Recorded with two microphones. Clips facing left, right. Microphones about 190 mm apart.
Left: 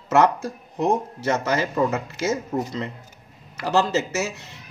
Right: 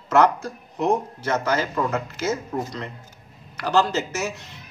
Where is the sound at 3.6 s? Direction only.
25° left (ahead or behind).